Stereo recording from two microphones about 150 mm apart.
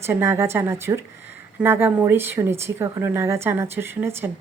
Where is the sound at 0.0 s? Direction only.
15° right (ahead or behind).